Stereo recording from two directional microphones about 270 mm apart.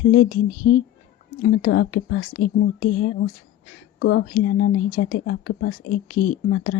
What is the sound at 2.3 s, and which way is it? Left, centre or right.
Speech, left.